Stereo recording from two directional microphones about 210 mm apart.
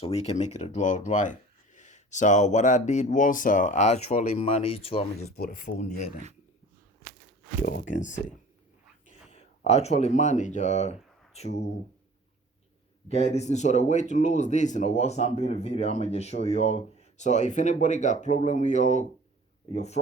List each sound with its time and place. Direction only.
0.0 s speech: 30° left (ahead or behind)
5.4 s speech: 40° left (ahead or behind)
7.6 s speech: 40° left (ahead or behind)
9.2 s speech: 30° left (ahead or behind)
13.1 s speech: 30° left (ahead or behind)